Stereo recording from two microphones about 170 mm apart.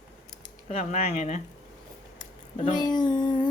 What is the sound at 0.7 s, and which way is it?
Speech, 40° left (ahead or behind).